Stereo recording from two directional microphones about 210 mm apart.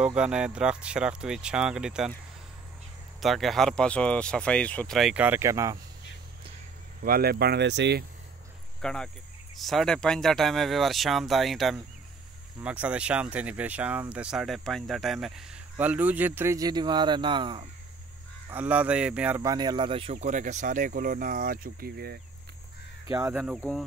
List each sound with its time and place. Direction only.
0.0 s speech: 5° right (ahead or behind)
3.2 s speech: centre (ahead or behind)
7.0 s speech: 45° right (ahead or behind)
8.8 s speech: 5° left (ahead or behind); by 17.6 s 20° right (ahead or behind)
18.5 s speech: 5° right (ahead or behind); by 22.2 s 50° right (ahead or behind)
23.0 s speech: 15° right (ahead or behind)
23.3 s speech: 5° right (ahead or behind)